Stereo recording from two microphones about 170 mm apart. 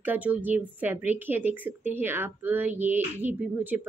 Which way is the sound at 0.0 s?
10° right (ahead or behind).